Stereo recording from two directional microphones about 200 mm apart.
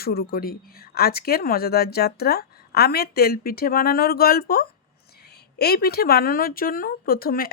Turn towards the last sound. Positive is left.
turn(degrees=45)  # may be behind; listen again after turning